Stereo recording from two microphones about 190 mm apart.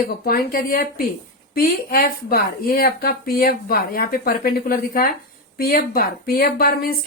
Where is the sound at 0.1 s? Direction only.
50° left (ahead or behind).